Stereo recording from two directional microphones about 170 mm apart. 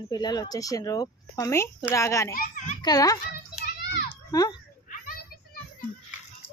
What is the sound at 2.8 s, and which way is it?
Speech, 20° left (ahead or behind).